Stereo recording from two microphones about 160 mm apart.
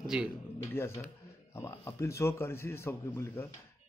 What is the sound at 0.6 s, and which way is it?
Speech, 15° left (ahead or behind).